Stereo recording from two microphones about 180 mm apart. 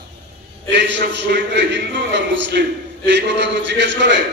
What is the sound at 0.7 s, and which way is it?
Mantra, 75° right (ahead or behind).